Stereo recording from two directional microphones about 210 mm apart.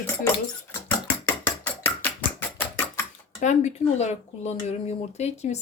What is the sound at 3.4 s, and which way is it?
Speech, 35° left (ahead or behind).